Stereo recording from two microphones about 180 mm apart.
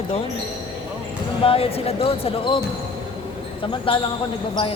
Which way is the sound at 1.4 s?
35° left (ahead or behind).